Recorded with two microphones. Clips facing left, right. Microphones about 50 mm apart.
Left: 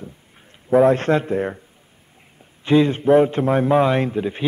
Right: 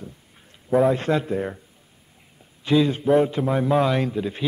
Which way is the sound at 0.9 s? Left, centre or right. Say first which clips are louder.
Left 4 dB; left.